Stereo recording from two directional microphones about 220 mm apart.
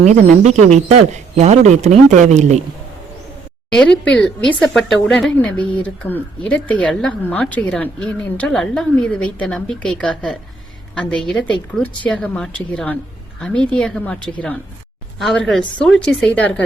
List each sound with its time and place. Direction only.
0.0 s speech: 30° right (ahead or behind)
3.7 s a woman's voice: 5° left (ahead or behind)